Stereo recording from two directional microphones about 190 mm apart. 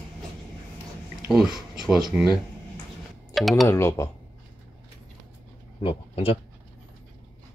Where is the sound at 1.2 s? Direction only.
Centre (ahead or behind).